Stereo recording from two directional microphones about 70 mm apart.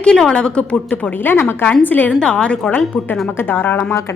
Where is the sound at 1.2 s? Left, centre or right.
Left.